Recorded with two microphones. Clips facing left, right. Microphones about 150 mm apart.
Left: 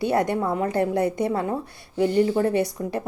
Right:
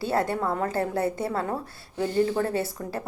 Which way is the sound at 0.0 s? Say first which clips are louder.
Left 3 dB; 20° left (ahead or behind).